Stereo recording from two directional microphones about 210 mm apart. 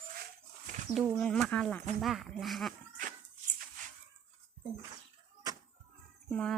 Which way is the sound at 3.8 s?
40° right (ahead or behind).